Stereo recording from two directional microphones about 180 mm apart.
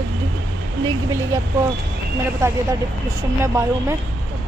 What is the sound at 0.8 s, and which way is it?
Speech, 15° right (ahead or behind).